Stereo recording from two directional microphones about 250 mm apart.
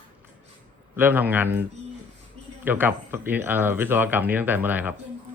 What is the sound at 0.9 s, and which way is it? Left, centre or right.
Speech, centre.